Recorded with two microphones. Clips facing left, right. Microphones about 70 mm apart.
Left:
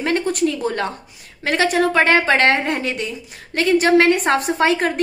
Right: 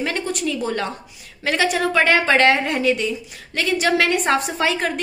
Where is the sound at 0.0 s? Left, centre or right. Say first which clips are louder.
Left 5 dB; left.